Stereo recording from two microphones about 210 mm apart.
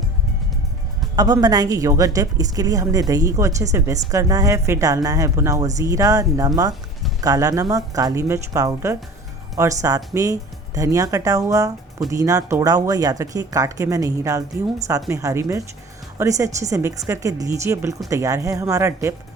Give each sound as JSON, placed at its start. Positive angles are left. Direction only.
{"t": 1.1, "sound": "a woman's voice", "side_deg": -20}